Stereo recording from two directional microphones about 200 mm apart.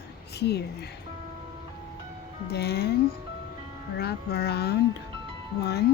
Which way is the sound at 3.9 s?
55° left (ahead or behind).